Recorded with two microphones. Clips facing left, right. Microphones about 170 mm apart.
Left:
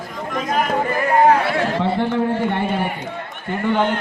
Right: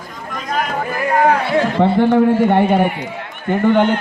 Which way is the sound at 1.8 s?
60° right (ahead or behind).